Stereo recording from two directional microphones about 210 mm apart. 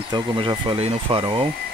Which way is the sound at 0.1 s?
20° right (ahead or behind).